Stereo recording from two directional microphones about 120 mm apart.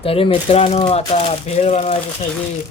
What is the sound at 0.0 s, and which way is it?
Speech, 50° left (ahead or behind).